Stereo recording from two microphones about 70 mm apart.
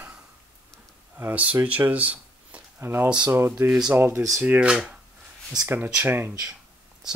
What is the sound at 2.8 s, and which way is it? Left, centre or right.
Speech, right.